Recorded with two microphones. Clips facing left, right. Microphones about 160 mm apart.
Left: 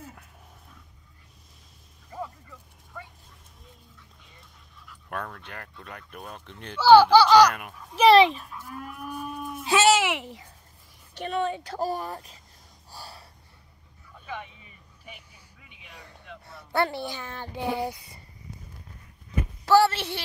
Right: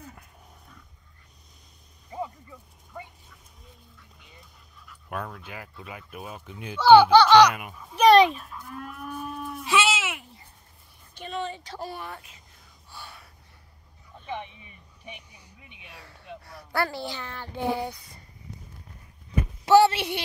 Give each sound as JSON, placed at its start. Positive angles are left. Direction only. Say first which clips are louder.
{"t": 0.0, "sound": "dog", "louder": "left 1 dB", "side_deg": 5}
{"t": 2.0, "sound": "a sound", "louder": "right 2 dB", "side_deg": -15}
{"t": 2.9, "sound": "vehicle", "louder": "right 2 dB", "side_deg": -15}
{"t": 4.4, "sound": "a child's voice", "louder": "even", "side_deg": 0}
{"t": 9.7, "sound": "a sound", "louder": "left 4 dB", "side_deg": 40}
{"t": 9.9, "sound": "a sound", "louder": "left 8 dB", "side_deg": 70}
{"t": 11.1, "sound": "a woman's voice", "louder": "left 5 dB", "side_deg": 55}
{"t": 12.9, "sound": "gasp", "louder": "left 1 dB", "side_deg": 35}
{"t": 14.2, "sound": "vehicle", "louder": "right 3 dB", "side_deg": -25}
{"t": 15.9, "sound": "speech", "louder": "right 2 dB", "side_deg": 20}
{"t": 17.8, "sound": "speech", "louder": "left 3 dB", "side_deg": 5}
{"t": 19.6, "sound": "speech", "louder": "right 2 dB", "side_deg": -20}